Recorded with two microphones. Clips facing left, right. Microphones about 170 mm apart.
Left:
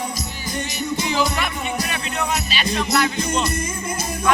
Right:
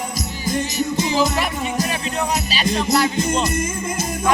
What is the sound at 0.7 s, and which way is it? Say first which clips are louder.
Music: right 1 dB; 35° right (ahead or behind).